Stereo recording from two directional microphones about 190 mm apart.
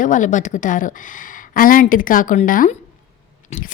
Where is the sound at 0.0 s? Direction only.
40° left (ahead or behind).